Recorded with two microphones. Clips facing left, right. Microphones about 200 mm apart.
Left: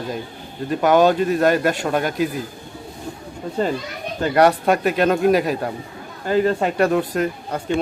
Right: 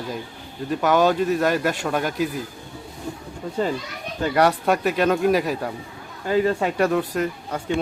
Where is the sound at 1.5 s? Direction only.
50° left (ahead or behind).